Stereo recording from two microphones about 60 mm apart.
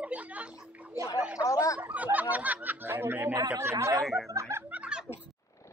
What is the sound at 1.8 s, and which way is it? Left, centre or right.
Speech, right.